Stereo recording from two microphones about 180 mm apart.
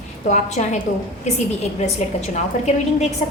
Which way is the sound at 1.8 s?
40° left (ahead or behind).